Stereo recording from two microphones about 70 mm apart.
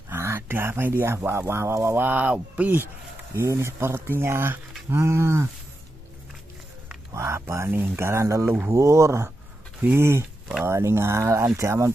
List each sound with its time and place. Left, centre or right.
0.1 s speech: right
3.3 s speech: right
7.2 s speech: right